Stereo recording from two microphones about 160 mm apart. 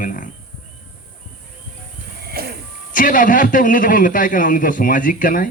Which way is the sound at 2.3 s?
75° right (ahead or behind).